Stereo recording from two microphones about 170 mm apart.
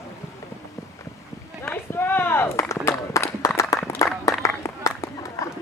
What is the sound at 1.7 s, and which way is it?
Run, 10° left (ahead or behind).